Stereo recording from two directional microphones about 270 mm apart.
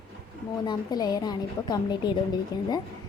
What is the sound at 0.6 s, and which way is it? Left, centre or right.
A woman's voice, centre.